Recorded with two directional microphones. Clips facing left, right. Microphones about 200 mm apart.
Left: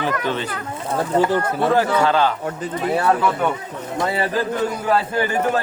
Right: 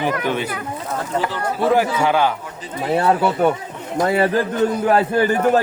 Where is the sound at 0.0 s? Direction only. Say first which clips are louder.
Right 2 dB; 15° right (ahead or behind).